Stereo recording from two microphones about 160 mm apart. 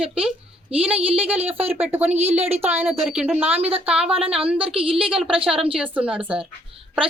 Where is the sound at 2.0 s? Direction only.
40° right (ahead or behind).